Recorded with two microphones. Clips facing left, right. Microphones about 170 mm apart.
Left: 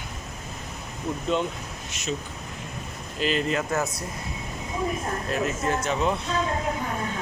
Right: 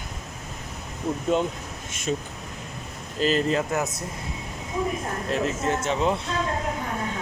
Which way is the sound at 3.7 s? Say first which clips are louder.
Even; 20° right (ahead or behind).